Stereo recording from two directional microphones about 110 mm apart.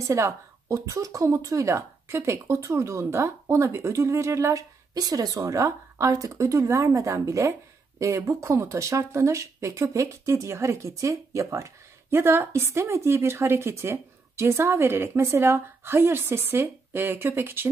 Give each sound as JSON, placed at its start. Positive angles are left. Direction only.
{"t": 0.1, "sound": "speech", "side_deg": -25}